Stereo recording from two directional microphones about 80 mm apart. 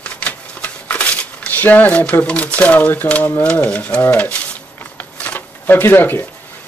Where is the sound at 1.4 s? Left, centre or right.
Left.